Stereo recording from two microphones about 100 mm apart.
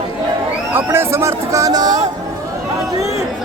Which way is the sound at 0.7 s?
25° right (ahead or behind).